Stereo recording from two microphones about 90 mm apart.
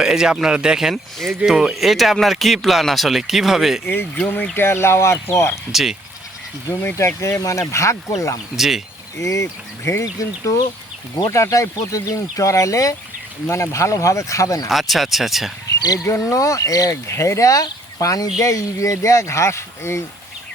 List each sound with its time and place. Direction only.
0.0 s speech: 5° right (ahead or behind)
3.8 s speech: 20° left (ahead or behind)
5.7 s speech: 5° right (ahead or behind)
6.7 s speech: 35° left (ahead or behind)
8.5 s speech: 5° right (ahead or behind)
9.1 s speech: 35° left (ahead or behind)
14.7 s speech: centre (ahead or behind)
16.3 s speech: 40° left (ahead or behind)